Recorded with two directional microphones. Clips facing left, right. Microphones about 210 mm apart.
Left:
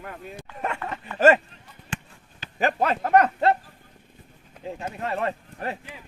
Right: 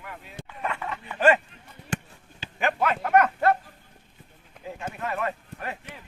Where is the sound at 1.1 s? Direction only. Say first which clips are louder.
Left 3 dB; 40° left (ahead or behind).